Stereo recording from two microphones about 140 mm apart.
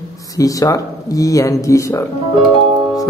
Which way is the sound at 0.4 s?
25° left (ahead or behind).